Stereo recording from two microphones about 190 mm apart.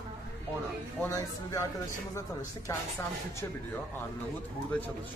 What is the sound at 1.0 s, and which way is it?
Speech, 15° left (ahead or behind).